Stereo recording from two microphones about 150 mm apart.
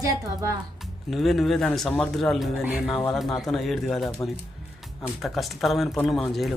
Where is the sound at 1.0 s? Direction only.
Centre (ahead or behind).